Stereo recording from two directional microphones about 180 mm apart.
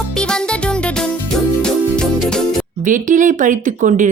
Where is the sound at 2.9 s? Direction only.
45° right (ahead or behind).